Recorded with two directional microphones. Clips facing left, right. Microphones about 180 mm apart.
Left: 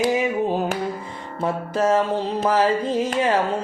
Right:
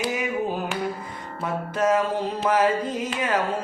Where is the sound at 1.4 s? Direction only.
30° left (ahead or behind).